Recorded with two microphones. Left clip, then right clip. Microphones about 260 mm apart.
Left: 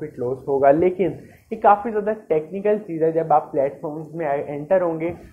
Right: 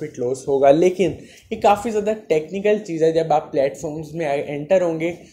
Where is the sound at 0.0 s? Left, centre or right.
Right.